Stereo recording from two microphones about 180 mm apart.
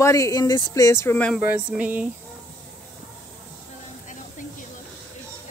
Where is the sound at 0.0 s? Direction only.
20° left (ahead or behind).